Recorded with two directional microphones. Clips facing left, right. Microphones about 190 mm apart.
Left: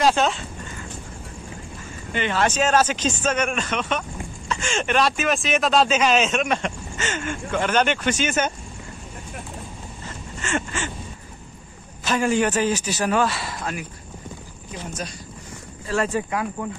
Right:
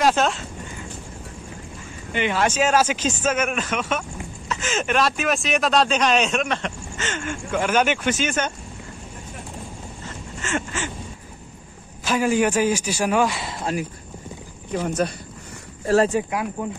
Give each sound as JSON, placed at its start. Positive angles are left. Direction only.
{"t": 0.0, "sound": "speech", "side_deg": 0}
{"t": 2.1, "sound": "a man's voice", "side_deg": -10}
{"t": 7.5, "sound": "speech", "side_deg": -10}
{"t": 10.4, "sound": "a sound", "side_deg": -5}
{"t": 12.0, "sound": "a man's voice", "side_deg": -10}
{"t": 14.7, "sound": "speech", "side_deg": -60}
{"t": 16.1, "sound": "a man's voice", "side_deg": -10}